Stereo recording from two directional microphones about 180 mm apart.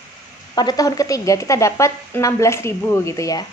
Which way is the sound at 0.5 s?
20° left (ahead or behind).